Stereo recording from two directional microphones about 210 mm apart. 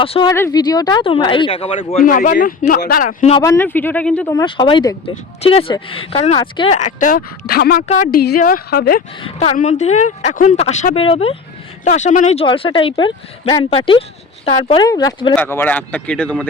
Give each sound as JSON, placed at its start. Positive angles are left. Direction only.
{"t": 0.0, "sound": "speech", "side_deg": 25}
{"t": 2.0, "sound": "a woman's voice", "side_deg": 40}
{"t": 3.3, "sound": "speech", "side_deg": 15}
{"t": 4.4, "sound": "speech", "side_deg": 25}
{"t": 7.9, "sound": "a woman's voice", "side_deg": 35}
{"t": 8.2, "sound": "a woman's voice", "side_deg": 45}
{"t": 9.2, "sound": "a woman's voice", "side_deg": 30}